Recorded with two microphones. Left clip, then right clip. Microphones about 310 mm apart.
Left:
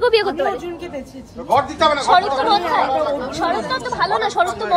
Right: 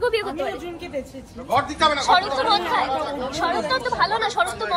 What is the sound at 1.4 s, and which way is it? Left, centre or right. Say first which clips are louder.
A woman's voice: left 4 dB; left.